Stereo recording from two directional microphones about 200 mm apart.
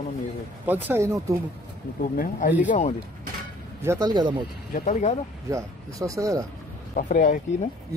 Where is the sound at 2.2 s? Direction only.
45° left (ahead or behind).